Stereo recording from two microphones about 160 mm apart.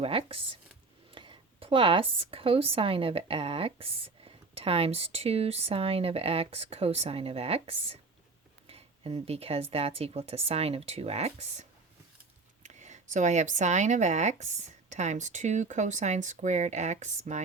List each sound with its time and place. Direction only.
0.0 s speech: 35° right (ahead or behind)
12.6 s speech: 50° right (ahead or behind)